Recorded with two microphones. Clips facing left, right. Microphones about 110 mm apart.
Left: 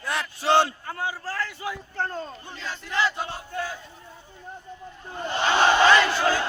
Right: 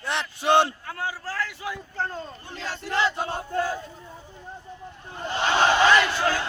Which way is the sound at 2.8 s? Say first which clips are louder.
Right 1 dB; 30° right (ahead or behind).